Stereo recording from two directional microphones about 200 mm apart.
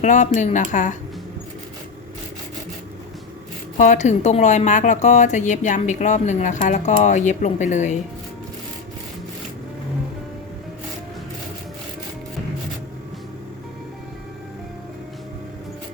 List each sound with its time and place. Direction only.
0.0 s a woman's voice: 35° left (ahead or behind)
3.8 s a woman's voice: 35° left (ahead or behind)